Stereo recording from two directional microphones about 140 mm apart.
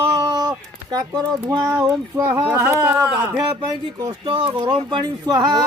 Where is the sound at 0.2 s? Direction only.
25° right (ahead or behind).